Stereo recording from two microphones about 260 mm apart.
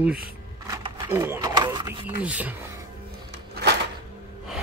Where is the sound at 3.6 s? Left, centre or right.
Right.